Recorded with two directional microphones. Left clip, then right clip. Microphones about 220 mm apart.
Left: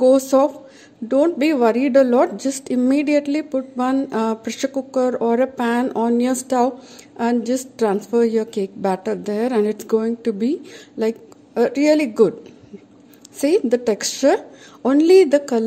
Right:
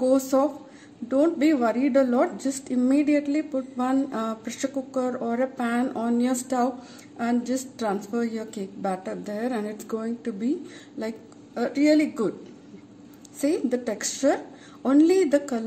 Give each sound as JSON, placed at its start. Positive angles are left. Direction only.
{"t": 0.0, "sound": "a woman's voice", "side_deg": 35}
{"t": 13.4, "sound": "a woman's voice", "side_deg": 40}